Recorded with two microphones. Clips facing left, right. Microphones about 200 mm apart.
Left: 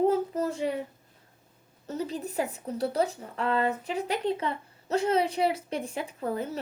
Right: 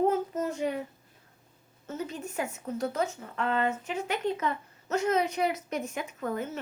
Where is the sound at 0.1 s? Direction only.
35° left (ahead or behind).